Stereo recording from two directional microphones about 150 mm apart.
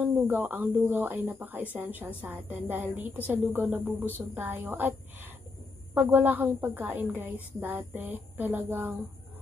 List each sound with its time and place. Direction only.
0.0 s a woman's voice: 10° right (ahead or behind)